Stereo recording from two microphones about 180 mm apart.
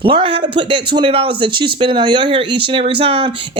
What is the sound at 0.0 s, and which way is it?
Speech, 30° right (ahead or behind).